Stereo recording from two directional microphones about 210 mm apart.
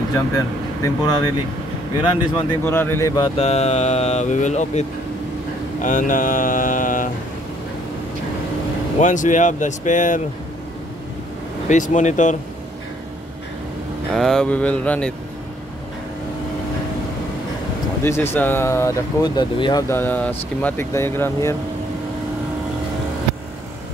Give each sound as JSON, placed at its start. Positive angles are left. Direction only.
{"t": 1.0, "sound": "speech", "side_deg": 20}
{"t": 3.3, "sound": "speech", "side_deg": 30}
{"t": 9.0, "sound": "speech", "side_deg": 35}
{"t": 11.7, "sound": "speech", "side_deg": 35}
{"t": 14.1, "sound": "speech", "side_deg": 0}
{"t": 18.0, "sound": "speech", "side_deg": 10}